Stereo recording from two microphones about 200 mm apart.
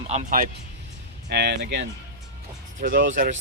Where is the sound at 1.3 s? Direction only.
55° right (ahead or behind).